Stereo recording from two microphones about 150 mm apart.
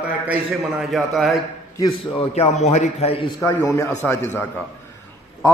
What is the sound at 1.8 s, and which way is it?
A man's voice, 40° left (ahead or behind).